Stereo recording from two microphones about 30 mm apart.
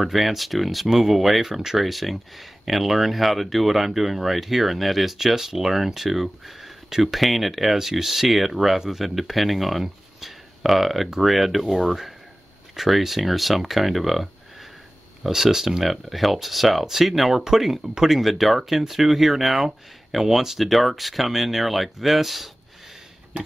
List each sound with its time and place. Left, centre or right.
0.0 s speech: centre
18.2 s speech: centre
23.3 s a sound: right